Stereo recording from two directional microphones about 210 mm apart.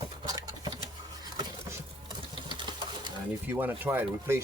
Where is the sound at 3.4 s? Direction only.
10° right (ahead or behind).